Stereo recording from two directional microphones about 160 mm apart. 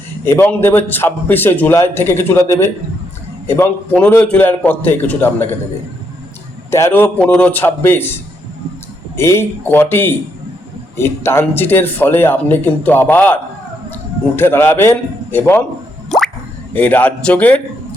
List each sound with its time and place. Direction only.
0.3 s speech: 15° left (ahead or behind)
6.7 s a man's voice: 15° left (ahead or behind)
16.0 s drip: centre (ahead or behind)
16.7 s speech: 10° left (ahead or behind)